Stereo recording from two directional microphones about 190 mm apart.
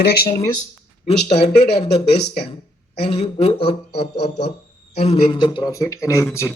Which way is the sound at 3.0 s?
30° left (ahead or behind).